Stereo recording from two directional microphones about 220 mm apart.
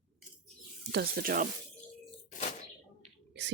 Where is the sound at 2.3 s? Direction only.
35° left (ahead or behind).